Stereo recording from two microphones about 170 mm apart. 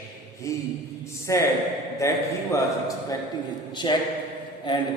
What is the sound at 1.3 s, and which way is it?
A man's voice, 20° left (ahead or behind).